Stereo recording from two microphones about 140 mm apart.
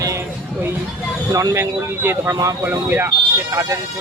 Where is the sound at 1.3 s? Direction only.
20° right (ahead or behind).